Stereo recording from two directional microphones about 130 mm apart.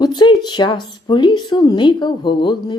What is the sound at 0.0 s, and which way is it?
Speech, 35° left (ahead or behind).